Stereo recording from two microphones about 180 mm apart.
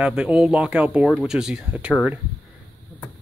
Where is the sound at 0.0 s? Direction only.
5° right (ahead or behind).